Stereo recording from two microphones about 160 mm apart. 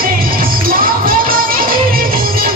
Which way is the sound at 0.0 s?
65° right (ahead or behind).